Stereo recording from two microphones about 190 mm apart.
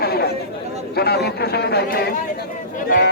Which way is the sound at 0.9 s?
60° left (ahead or behind).